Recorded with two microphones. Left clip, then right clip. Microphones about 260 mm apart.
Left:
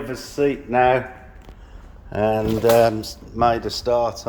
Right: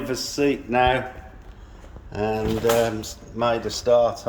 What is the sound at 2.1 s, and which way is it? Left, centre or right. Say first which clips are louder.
Speech: left 4 dB; centre.